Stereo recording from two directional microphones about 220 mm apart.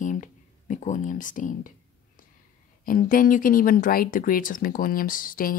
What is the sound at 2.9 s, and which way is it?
Speech, 40° left (ahead or behind).